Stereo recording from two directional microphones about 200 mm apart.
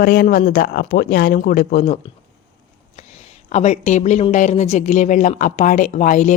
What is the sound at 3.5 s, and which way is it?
A woman's voice, 35° left (ahead or behind).